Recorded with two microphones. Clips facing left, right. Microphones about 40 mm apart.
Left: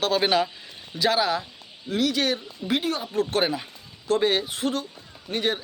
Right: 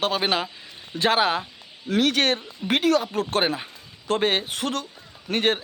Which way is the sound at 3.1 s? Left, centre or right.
Right.